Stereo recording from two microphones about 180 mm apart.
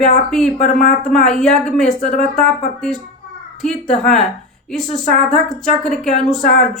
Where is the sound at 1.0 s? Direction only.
5° left (ahead or behind).